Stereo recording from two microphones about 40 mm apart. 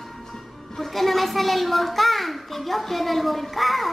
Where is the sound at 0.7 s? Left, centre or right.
Centre.